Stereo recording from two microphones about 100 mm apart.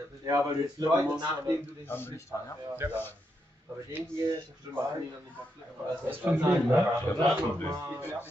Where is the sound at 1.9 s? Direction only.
20° left (ahead or behind).